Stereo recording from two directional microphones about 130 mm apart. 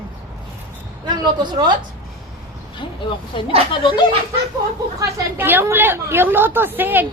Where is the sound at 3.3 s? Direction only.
40° left (ahead or behind).